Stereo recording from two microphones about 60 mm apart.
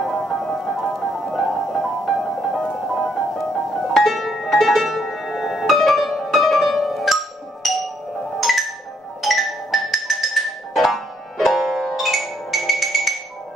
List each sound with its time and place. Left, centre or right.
0.0 s music: centre